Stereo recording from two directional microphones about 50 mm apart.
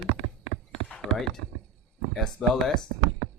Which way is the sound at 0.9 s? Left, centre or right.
Centre.